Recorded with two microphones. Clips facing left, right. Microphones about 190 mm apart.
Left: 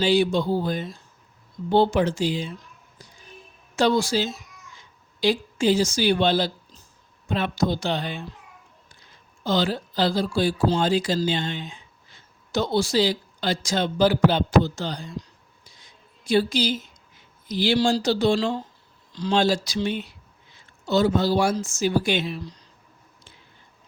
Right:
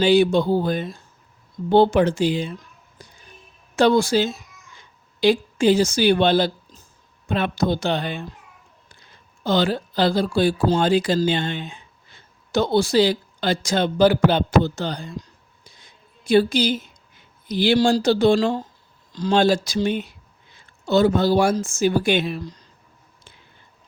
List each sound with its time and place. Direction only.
0.0 s speech: 60° right (ahead or behind)
3.0 s a sound: 60° right (ahead or behind)
3.8 s speech: 55° right (ahead or behind)
9.4 s speech: 60° right (ahead or behind)
15.6 s a sound: 55° right (ahead or behind)
17.5 s speech: 60° right (ahead or behind)